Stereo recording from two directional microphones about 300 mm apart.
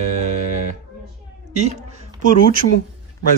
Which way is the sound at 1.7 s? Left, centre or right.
Right.